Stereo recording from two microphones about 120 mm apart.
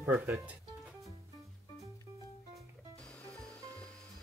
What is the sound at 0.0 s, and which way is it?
Speech, 15° right (ahead or behind).